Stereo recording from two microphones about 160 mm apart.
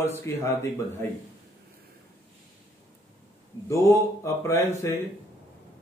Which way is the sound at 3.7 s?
20° left (ahead or behind).